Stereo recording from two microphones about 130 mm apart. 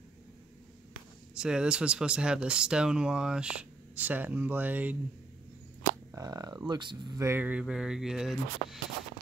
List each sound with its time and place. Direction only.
1.3 s speech: 5° right (ahead or behind)
6.1 s speech: 30° right (ahead or behind)
7.2 s speech: 15° right (ahead or behind); by 8.7 s centre (ahead or behind)